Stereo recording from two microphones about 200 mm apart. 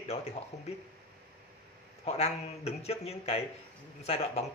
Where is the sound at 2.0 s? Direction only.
30° left (ahead or behind).